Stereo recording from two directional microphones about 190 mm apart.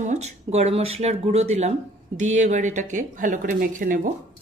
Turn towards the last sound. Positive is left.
turn(degrees=-45)  # may be behind; listen again after turning